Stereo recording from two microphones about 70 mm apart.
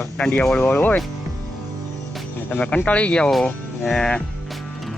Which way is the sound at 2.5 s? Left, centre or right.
Centre.